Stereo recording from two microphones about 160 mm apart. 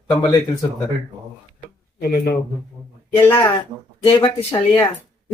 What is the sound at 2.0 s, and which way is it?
Speech, 75° left (ahead or behind).